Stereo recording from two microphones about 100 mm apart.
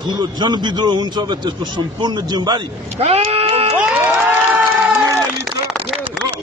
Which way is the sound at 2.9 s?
90° right.